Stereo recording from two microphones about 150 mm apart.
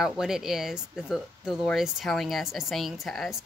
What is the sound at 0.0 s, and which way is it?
Speech, 5° right (ahead or behind).